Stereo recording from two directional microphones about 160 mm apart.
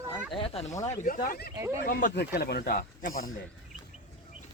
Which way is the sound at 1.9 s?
55° left (ahead or behind).